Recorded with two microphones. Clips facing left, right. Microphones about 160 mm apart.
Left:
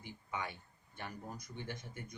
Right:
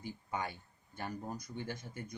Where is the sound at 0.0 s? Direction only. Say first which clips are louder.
Right 3 dB; 40° right (ahead or behind).